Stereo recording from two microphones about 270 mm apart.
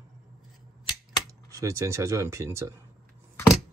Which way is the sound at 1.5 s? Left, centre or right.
Centre.